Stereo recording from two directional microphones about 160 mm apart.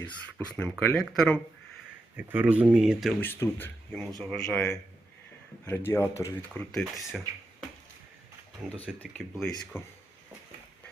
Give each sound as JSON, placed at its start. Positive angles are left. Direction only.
{"t": 0.3, "sound": "speech", "side_deg": 10}
{"t": 2.1, "sound": "speech", "side_deg": -10}
{"t": 3.2, "sound": "speech", "side_deg": 15}
{"t": 5.6, "sound": "speech", "side_deg": 15}
{"t": 6.7, "sound": "speech", "side_deg": 0}
{"t": 9.0, "sound": "speech", "side_deg": 0}
{"t": 9.7, "sound": "speech", "side_deg": 15}